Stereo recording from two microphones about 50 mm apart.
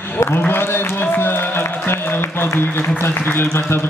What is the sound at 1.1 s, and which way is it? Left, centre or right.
Music, left.